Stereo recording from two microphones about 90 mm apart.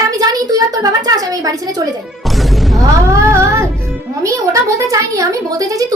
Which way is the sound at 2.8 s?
35° right (ahead or behind).